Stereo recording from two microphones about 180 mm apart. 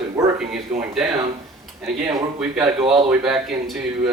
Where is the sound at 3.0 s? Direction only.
5° right (ahead or behind).